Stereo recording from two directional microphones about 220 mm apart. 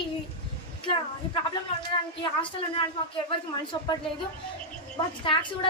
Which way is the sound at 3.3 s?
20° left (ahead or behind).